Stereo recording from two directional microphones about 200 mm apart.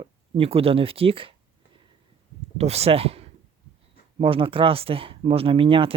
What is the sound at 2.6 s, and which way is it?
Speech, 30° right (ahead or behind).